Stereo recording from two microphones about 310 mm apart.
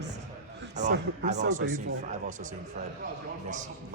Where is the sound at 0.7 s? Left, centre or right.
Right.